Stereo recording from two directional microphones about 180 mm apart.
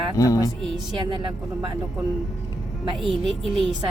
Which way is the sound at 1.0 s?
30° right (ahead or behind).